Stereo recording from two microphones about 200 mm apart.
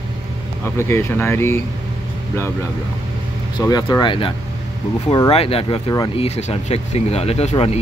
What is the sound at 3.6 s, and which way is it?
Speech, 20° left (ahead or behind).